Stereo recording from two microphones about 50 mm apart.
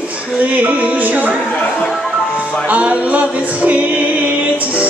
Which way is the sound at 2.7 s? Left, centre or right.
Right.